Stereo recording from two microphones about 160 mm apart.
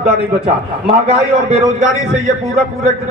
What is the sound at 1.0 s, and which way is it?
Speech, 40° right (ahead or behind).